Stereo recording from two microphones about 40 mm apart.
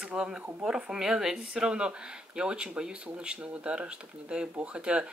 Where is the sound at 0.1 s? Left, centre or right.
Right.